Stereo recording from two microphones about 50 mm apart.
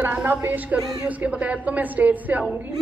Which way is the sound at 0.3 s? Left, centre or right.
Right.